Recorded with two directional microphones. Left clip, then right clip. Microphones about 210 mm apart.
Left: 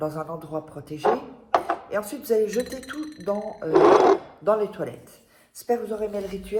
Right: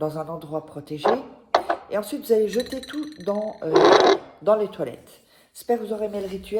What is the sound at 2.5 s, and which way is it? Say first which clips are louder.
A woman's voice: right 1 dB; 45° right (ahead or behind).